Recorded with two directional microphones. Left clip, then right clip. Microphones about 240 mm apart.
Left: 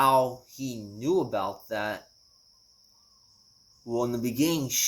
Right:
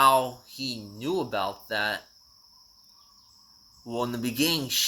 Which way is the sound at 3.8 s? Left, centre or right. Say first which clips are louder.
Left 2 dB; centre.